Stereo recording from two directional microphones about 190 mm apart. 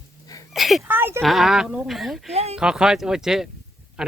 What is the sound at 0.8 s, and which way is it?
Speech, 10° right (ahead or behind).